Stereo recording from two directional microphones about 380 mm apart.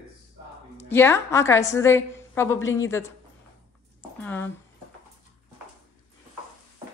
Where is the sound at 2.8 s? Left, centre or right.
Centre.